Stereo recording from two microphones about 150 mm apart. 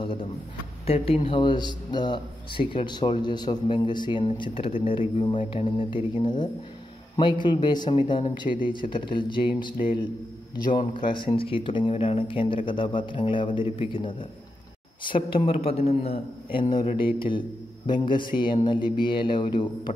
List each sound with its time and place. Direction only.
0.0 s a sound: 35° left (ahead or behind)
0.8 s a man's voice: 40° left (ahead or behind)
11.2 s a man's voice: 35° left (ahead or behind)